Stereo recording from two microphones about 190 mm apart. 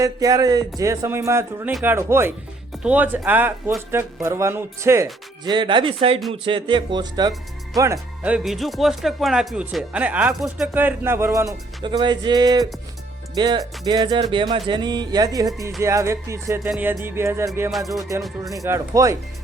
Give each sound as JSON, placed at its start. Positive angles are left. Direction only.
{"t": 0.0, "sound": "speech", "side_deg": -20}
{"t": 5.5, "sound": "speech", "side_deg": -25}
{"t": 7.9, "sound": "speech", "side_deg": -5}
{"t": 16.6, "sound": "speech", "side_deg": -5}
{"t": 17.7, "sound": "speech", "side_deg": 0}
{"t": 18.5, "sound": "speech", "side_deg": -15}